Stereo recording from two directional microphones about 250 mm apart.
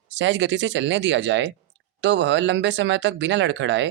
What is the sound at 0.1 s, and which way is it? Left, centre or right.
Speech, right.